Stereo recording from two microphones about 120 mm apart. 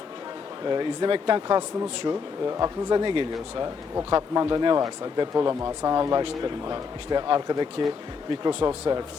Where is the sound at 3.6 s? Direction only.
30° right (ahead or behind).